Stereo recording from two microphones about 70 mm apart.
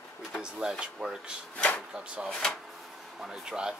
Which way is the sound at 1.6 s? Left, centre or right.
Centre.